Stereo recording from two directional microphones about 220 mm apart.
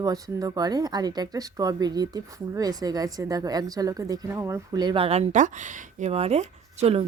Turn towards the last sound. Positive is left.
turn(degrees=-25)  # may be behind; listen again after turning